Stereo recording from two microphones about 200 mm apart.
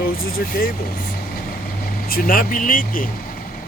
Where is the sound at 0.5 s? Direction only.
45° left (ahead or behind).